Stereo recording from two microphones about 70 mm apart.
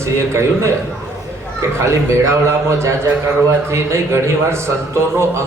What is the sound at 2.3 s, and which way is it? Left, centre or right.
A man's voice, right.